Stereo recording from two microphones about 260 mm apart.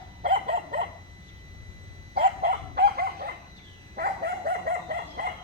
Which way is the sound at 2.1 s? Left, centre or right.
Right.